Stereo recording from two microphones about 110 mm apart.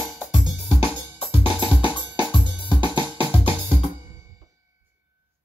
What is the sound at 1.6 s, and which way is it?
Drum, 50° left (ahead or behind).